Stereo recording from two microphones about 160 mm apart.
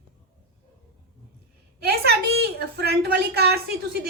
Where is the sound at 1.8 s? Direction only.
85° right.